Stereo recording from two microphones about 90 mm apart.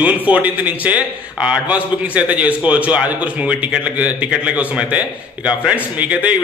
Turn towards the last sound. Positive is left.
turn(degrees=-15)  # may be behind; listen again after turning